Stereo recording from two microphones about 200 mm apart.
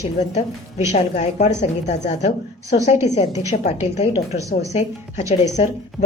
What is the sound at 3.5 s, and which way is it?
A woman's voice, 35° left (ahead or behind).